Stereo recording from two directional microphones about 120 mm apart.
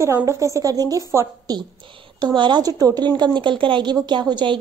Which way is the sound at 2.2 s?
40° right (ahead or behind).